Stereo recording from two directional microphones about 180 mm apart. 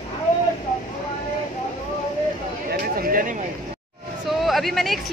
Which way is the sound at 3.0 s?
50° right (ahead or behind).